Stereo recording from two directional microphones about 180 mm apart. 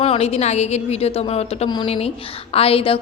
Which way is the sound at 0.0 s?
35° left (ahead or behind).